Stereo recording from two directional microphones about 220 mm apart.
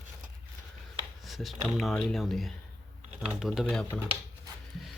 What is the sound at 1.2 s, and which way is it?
Speech, centre (ahead or behind).